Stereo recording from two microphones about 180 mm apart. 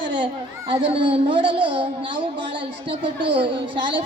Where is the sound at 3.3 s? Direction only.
25° right (ahead or behind).